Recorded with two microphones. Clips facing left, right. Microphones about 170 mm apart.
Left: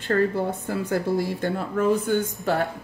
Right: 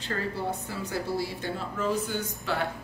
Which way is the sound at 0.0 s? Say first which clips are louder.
Left 9 dB; 50° left (ahead or behind).